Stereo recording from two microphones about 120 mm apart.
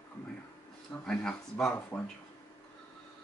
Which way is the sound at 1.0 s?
5° left (ahead or behind).